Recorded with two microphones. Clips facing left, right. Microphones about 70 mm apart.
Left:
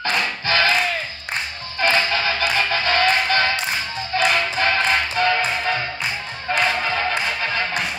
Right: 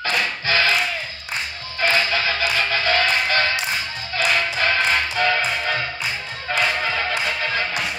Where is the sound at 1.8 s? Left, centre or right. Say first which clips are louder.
Left 1 dB; left.